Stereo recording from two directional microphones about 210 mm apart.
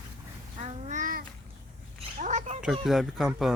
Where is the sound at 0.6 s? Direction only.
35° right (ahead or behind).